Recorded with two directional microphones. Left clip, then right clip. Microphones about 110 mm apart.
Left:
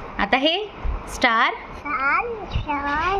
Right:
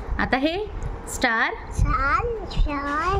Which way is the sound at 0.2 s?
55° right (ahead or behind).